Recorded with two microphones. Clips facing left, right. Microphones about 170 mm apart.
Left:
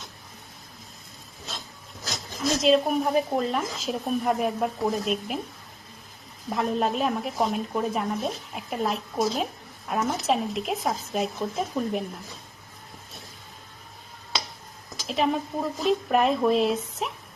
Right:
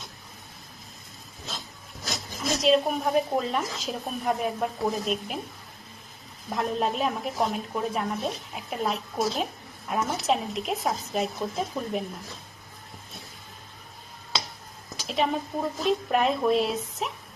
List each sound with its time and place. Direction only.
2.4 s speech: centre (ahead or behind)
6.5 s speech: centre (ahead or behind)
15.0 s a woman's voice: centre (ahead or behind)